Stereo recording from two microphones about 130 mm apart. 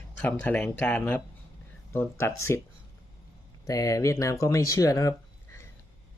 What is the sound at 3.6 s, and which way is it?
Speech, 25° left (ahead or behind).